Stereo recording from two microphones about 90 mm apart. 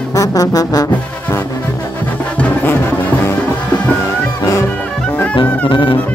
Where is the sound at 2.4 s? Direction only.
25° left (ahead or behind).